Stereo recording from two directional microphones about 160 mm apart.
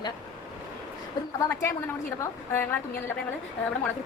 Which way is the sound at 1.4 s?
15° left (ahead or behind).